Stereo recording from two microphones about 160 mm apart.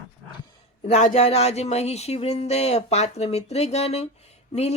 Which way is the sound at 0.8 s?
50° left (ahead or behind).